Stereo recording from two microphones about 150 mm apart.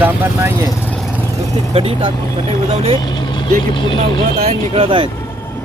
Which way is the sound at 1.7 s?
35° right (ahead or behind).